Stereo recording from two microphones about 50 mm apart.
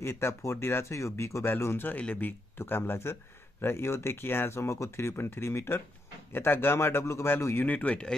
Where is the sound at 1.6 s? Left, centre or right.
Left.